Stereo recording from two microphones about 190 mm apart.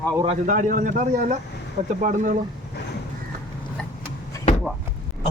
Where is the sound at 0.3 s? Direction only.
40° right (ahead or behind).